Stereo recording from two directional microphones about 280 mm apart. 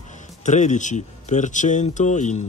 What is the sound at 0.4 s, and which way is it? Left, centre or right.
Speech, left.